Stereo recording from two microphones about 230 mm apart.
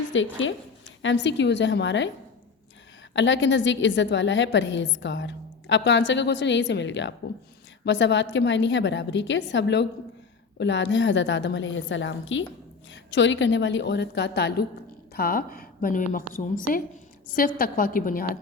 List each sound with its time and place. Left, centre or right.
0.1 s a woman's voice: left
3.1 s a woman's voice: left